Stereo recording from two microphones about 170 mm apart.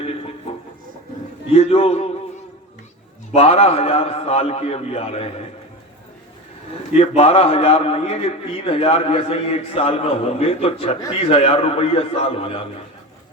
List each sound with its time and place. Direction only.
1.5 s a man's voice: 35° left (ahead or behind)
3.3 s a man's voice: 35° left (ahead or behind)
7.2 s a man's voice: 35° left (ahead or behind)